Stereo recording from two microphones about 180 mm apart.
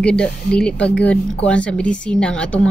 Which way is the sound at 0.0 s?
5° left (ahead or behind).